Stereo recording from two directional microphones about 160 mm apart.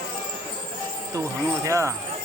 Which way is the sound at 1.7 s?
20° right (ahead or behind).